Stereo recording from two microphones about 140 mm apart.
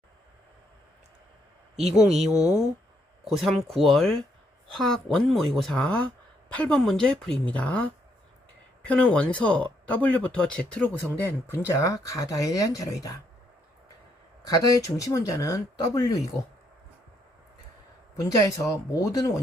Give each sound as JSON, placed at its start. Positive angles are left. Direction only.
{"t": 1.7, "sound": "speech", "side_deg": -50}
{"t": 2.2, "sound": "speech", "side_deg": -5}
{"t": 14.4, "sound": "speech", "side_deg": 25}
{"t": 18.2, "sound": "speech", "side_deg": 25}